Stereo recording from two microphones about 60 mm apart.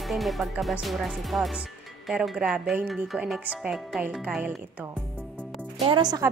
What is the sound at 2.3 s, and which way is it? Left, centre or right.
Speech, centre.